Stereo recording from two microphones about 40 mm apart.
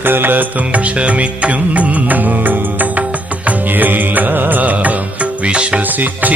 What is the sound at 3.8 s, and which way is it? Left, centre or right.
Music, right.